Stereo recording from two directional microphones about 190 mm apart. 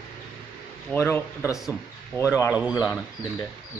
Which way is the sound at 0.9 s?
10° left (ahead or behind).